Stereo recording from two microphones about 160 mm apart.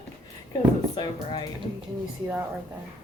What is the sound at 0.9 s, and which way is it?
Speech, 30° left (ahead or behind).